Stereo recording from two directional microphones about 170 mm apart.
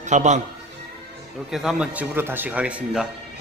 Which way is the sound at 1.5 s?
Centre (ahead or behind).